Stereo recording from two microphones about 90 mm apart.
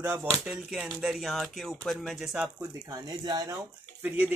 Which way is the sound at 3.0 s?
45° right (ahead or behind).